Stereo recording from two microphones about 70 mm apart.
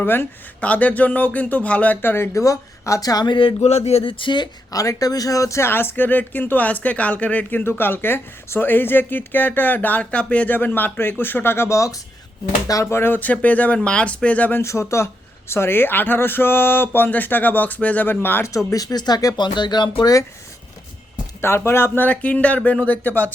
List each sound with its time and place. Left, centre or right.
0.0 s speech: left
0.6 s speech: centre
2.3 s speech: left
4.3 s speech: left
4.8 s speech: left
7.6 s speech: left
12.8 s speech: left
13.1 s speech: left
14.6 s speech: left
18.4 s speech: left
19.4 s speech: left
21.4 s speech: left